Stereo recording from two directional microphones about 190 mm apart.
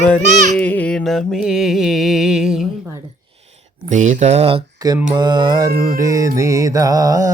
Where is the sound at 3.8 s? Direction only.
40° right (ahead or behind).